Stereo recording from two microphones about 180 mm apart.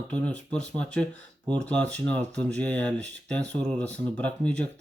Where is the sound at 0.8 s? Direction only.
5° left (ahead or behind).